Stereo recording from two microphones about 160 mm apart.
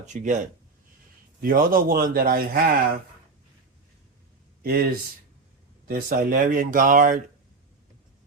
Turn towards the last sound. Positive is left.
turn(degrees=-55)  # may be behind; listen again after turning